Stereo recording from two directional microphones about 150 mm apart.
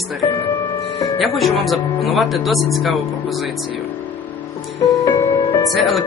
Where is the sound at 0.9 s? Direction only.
20° left (ahead or behind).